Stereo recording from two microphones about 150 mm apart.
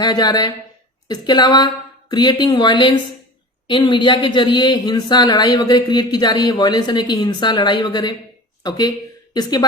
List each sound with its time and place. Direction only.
0.0 s speech: 25° left (ahead or behind)